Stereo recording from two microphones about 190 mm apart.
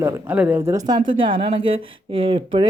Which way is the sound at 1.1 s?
25° right (ahead or behind).